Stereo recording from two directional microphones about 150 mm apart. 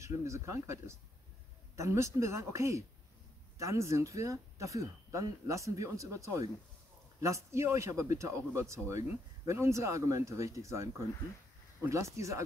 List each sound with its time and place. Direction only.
0.0 s speech: 20° right (ahead or behind)